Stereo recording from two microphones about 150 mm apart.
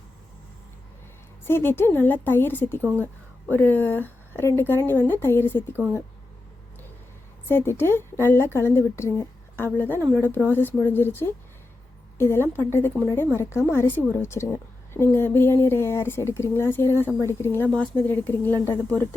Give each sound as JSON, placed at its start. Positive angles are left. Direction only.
{"t": 1.5, "sound": "a woman's voice", "side_deg": 15}
{"t": 5.7, "sound": "speech", "side_deg": -15}
{"t": 7.4, "sound": "a woman's voice", "side_deg": 15}
{"t": 10.0, "sound": "speech", "side_deg": -15}
{"t": 10.2, "sound": "a woman's voice", "side_deg": 15}